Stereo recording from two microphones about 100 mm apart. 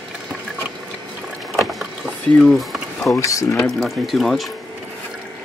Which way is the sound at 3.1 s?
30° left (ahead or behind).